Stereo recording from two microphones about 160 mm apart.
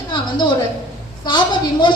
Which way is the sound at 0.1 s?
30° left (ahead or behind).